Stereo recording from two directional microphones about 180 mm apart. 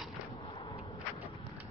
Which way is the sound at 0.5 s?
25° left (ahead or behind).